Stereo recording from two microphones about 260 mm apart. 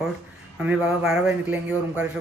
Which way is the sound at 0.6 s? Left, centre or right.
Centre.